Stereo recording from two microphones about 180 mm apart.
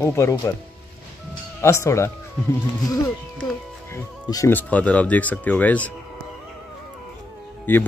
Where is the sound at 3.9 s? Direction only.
15° left (ahead or behind).